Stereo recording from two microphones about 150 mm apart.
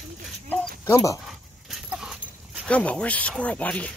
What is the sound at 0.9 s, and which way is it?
Speech, 20° left (ahead or behind).